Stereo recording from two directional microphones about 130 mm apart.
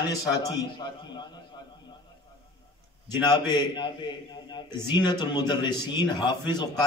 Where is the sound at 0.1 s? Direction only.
30° left (ahead or behind).